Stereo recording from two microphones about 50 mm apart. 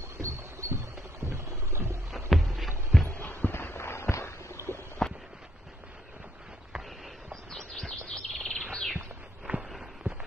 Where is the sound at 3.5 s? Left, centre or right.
Left.